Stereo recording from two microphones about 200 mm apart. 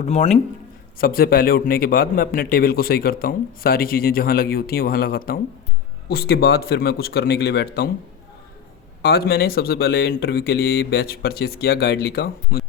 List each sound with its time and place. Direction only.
0.0 s speech: 35° left (ahead or behind)
0.9 s a man's voice: 50° left (ahead or behind)
9.0 s a man's voice: 50° left (ahead or behind)